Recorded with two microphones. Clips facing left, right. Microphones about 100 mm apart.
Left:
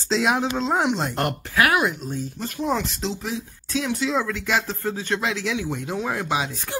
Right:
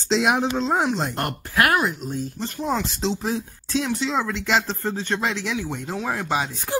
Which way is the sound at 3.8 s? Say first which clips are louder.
Left 2 dB; centre (ahead or behind).